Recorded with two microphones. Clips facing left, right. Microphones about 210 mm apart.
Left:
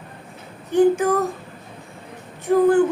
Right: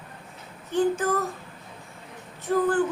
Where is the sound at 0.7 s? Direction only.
15° left (ahead or behind).